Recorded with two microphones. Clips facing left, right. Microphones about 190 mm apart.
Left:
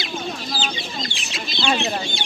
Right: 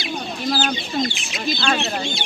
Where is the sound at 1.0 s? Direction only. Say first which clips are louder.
Right 7 dB; 25° left (ahead or behind).